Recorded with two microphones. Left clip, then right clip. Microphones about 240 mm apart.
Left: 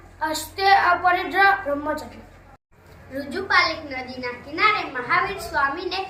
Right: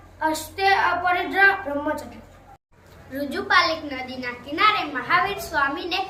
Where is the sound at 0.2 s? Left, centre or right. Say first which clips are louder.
Right 1 dB; centre.